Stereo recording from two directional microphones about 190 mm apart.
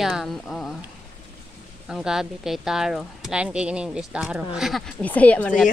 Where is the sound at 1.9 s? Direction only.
5° right (ahead or behind).